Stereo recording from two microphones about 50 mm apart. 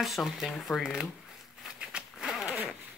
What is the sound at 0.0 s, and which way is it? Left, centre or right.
Speech, centre.